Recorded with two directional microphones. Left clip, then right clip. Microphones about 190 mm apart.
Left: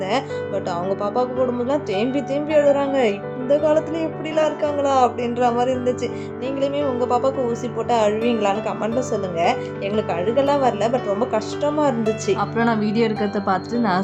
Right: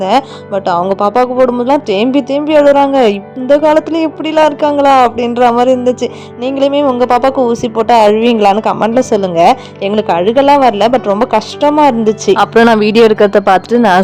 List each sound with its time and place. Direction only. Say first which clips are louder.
0.0 s speech: right 11 dB; 40° right (ahead or behind)